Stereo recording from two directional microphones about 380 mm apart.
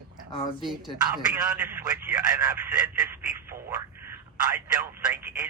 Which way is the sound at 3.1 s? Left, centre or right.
Centre.